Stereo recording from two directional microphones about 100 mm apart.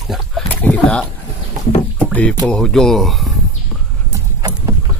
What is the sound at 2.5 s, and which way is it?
Speech, 5° left (ahead or behind).